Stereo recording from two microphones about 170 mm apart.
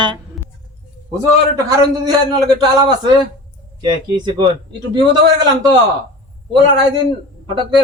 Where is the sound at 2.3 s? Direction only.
25° right (ahead or behind).